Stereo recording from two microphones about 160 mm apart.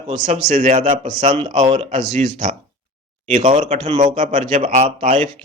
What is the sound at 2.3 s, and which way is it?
Speech, 50° right (ahead or behind).